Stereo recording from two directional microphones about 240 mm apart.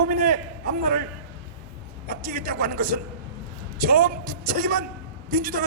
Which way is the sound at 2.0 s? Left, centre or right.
Right.